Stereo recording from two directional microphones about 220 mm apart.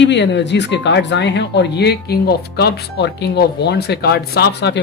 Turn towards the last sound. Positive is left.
turn(degrees=50)  # may be behind; listen again after turning